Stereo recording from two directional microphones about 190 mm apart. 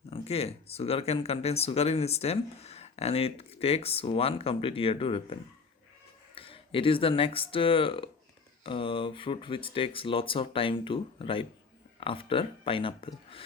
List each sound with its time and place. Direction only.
0.1 s speech: 30° left (ahead or behind)